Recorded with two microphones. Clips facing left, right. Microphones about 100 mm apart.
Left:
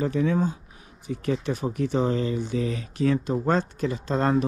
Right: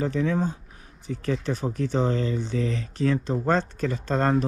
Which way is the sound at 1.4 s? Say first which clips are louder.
Left 1 dB; 35° right (ahead or behind).